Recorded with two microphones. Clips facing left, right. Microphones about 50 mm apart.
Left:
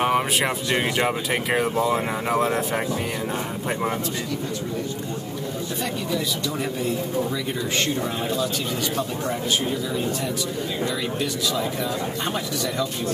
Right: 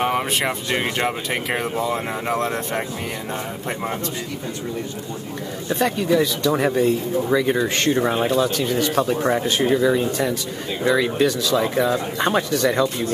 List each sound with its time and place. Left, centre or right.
0.0 s speech: centre
5.8 s speech: right
6.5 s speech: right
9.7 s speech: right
10.9 s speech: right